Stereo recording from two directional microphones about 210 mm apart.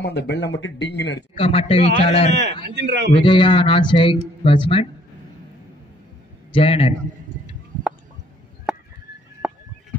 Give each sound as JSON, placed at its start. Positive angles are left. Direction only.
{"t": 0.0, "sound": "speech", "side_deg": 55}
{"t": 1.3, "sound": "a man's voice", "side_deg": 25}
{"t": 2.7, "sound": "a man's voice", "side_deg": -55}
{"t": 3.2, "sound": "a man's voice", "side_deg": 25}
{"t": 6.5, "sound": "a man's voice", "side_deg": 25}
{"t": 8.7, "sound": "a sound", "side_deg": -5}